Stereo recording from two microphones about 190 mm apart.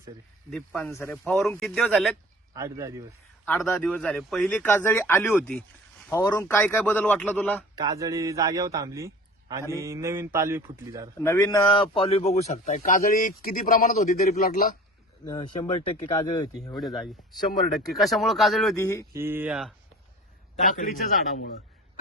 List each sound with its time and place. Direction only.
0.5 s speech: centre (ahead or behind)
0.9 s speech: 15° left (ahead or behind)
2.5 s speech: 15° right (ahead or behind)
3.4 s speech: 10° left (ahead or behind)
7.8 s a man's voice: 20° right (ahead or behind)
11.2 s speech: 15° left (ahead or behind)
11.7 s speech: 30° left (ahead or behind); by 14.8 s 45° left (ahead or behind)
15.3 s speech: 25° left (ahead or behind)
16.7 s speech: centre (ahead or behind)
18.8 s speech: 15° left (ahead or behind)
19.1 s speech: 10° right (ahead or behind)
20.7 s speech: 45° left (ahead or behind)